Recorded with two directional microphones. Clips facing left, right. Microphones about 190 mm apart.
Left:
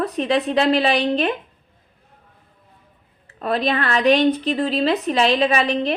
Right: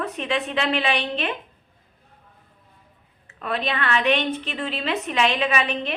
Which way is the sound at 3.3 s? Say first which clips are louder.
Left 6 dB; 35° left (ahead or behind).